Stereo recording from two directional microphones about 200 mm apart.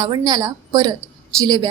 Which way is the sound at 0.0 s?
20° right (ahead or behind).